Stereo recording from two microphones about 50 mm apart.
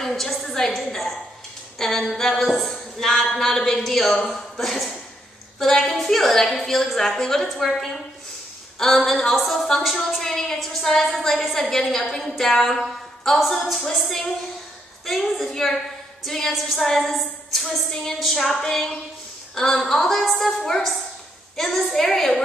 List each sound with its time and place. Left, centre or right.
0.0 s a sound: centre
0.7 s a woman's voice: centre
5.6 s a woman's voice: centre